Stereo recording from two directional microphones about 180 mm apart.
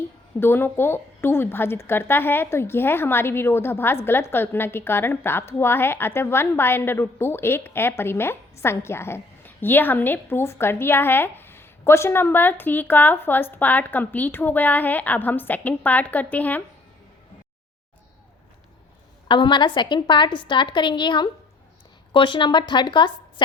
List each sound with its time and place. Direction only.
0.3 s a woman's voice: 10° left (ahead or behind)
19.3 s a woman's voice: 25° left (ahead or behind)